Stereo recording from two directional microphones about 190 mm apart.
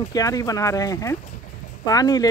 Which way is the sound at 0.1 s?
20° left (ahead or behind).